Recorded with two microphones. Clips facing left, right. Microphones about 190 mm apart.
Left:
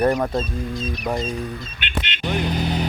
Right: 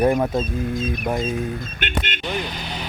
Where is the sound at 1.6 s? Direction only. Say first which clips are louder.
Right 2 dB; 50° right (ahead or behind).